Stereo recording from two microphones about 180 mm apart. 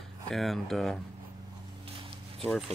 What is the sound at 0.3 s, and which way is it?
Speech, centre (ahead or behind).